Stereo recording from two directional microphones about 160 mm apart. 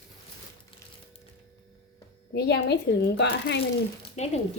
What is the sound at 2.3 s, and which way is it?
Speech, 90° left.